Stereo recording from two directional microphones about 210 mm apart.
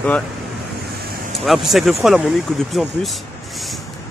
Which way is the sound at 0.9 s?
50° right (ahead or behind).